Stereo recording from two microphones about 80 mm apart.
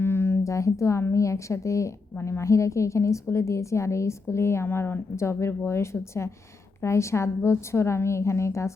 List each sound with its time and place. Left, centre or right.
0.0 s a woman's voice: left
2.1 s a woman's voice: left
2.4 s a woman's voice: left